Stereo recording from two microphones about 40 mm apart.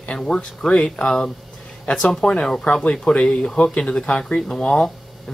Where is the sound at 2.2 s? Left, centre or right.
Left.